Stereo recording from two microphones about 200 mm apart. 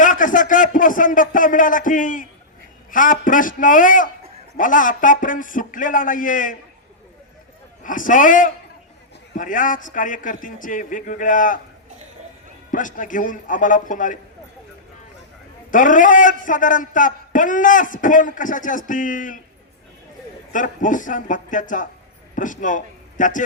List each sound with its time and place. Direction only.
0.0 s a man's voice: 40° left (ahead or behind)
7.9 s a man's voice: 40° left (ahead or behind)
12.7 s a man's voice: 40° left (ahead or behind)
15.7 s a man's voice: 40° left (ahead or behind)
20.5 s a man's voice: 40° left (ahead or behind)